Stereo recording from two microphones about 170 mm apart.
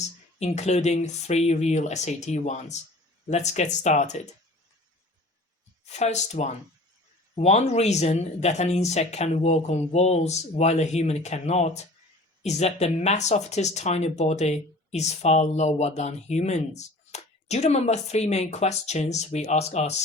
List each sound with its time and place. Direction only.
0.3 s speech: 40° left (ahead or behind)
5.8 s speech: 40° left (ahead or behind)